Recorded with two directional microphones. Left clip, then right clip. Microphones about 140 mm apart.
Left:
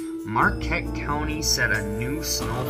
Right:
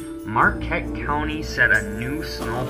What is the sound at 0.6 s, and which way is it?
Speech, 50° left (ahead or behind).